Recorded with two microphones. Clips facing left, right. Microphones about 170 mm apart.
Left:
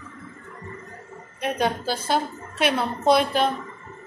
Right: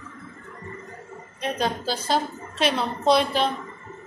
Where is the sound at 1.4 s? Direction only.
10° left (ahead or behind).